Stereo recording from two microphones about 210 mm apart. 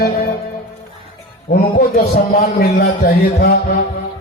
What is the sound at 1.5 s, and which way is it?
Music, 45° left (ahead or behind).